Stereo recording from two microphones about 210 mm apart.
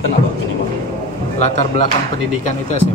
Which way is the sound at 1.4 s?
30° left (ahead or behind).